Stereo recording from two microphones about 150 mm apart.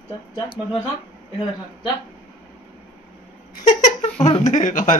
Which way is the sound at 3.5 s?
55° left (ahead or behind).